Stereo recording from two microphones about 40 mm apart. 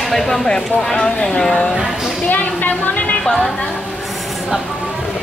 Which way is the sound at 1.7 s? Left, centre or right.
Centre.